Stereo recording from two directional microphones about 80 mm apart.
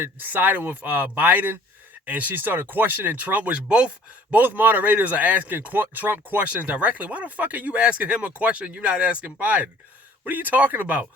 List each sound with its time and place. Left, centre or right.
0.0 s speech: right